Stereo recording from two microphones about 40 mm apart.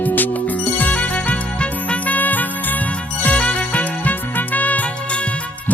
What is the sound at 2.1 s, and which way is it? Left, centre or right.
Music, left.